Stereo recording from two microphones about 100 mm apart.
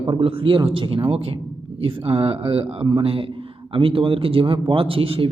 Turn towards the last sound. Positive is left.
turn(degrees=-65)  # may be behind; listen again after turning